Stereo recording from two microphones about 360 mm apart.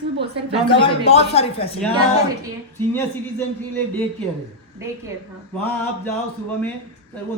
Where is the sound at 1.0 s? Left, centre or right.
Centre.